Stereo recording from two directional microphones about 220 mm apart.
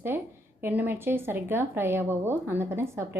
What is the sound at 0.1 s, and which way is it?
A woman's voice, 10° right (ahead or behind).